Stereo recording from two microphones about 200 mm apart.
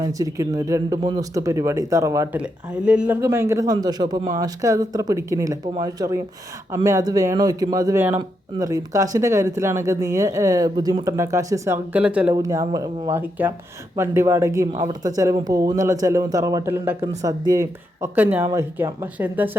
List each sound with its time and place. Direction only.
0.0 s speech: 15° right (ahead or behind)